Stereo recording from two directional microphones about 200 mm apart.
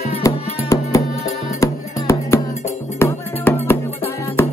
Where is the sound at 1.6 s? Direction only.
15° left (ahead or behind).